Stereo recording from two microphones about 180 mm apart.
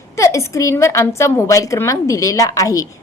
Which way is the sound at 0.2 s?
15° left (ahead or behind).